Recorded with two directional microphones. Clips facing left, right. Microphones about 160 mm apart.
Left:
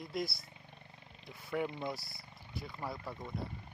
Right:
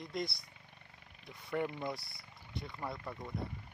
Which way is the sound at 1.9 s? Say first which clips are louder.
Even; centre (ahead or behind).